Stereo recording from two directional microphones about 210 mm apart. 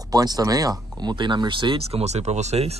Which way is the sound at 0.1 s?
20° right (ahead or behind).